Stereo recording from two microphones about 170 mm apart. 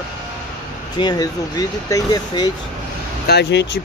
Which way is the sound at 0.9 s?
25° left (ahead or behind).